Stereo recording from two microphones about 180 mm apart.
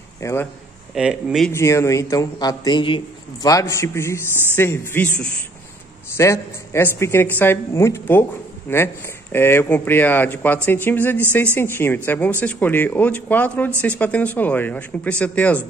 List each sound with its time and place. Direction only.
0.2 s speech: 15° left (ahead or behind)
0.9 s speech: centre (ahead or behind)
1.5 s a woman's voice: 15° left (ahead or behind)